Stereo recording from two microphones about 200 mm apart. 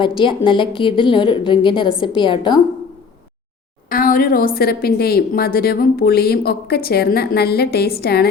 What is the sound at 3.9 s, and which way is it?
A woman's voice, 45° left (ahead or behind).